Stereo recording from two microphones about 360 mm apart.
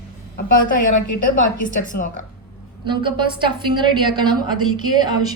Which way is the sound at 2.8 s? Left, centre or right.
Centre.